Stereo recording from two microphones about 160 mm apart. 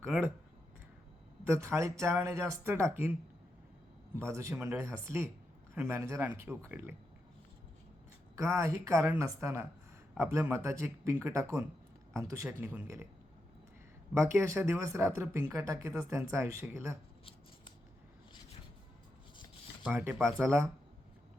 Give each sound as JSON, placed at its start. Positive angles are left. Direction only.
{"t": 0.0, "sound": "speech", "side_deg": -15}
{"t": 1.5, "sound": "speech", "side_deg": -15}
{"t": 8.4, "sound": "speech", "side_deg": -20}
{"t": 14.1, "sound": "speech", "side_deg": -15}
{"t": 19.9, "sound": "speech", "side_deg": -10}